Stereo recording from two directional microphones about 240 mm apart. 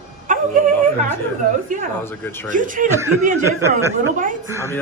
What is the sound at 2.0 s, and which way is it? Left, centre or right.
Speech, centre.